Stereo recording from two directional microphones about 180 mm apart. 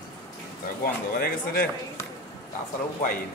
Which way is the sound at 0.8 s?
55° left (ahead or behind).